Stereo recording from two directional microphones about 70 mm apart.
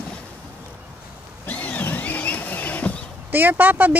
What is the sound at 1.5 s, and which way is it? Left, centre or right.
Vehicle, left.